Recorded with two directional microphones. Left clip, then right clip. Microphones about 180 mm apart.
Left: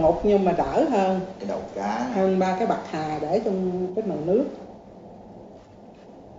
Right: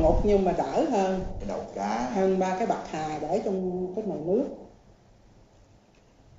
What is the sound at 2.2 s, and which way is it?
A woman's voice, 10° left (ahead or behind).